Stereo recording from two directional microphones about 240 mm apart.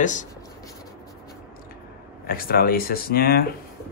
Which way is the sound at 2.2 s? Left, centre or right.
Left.